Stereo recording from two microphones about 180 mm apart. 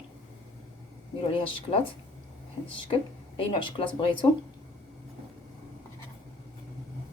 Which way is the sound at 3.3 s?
30° left (ahead or behind).